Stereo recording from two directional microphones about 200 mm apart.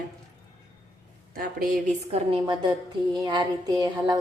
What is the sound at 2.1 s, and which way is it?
A woman's voice, 25° right (ahead or behind).